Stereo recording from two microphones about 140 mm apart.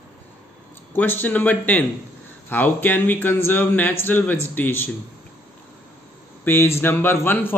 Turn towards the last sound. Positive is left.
turn(degrees=15)  # may be behind; listen again after turning